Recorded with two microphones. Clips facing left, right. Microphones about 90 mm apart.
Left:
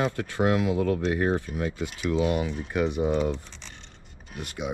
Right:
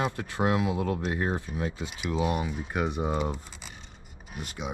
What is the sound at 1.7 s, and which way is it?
Speech, 10° right (ahead or behind).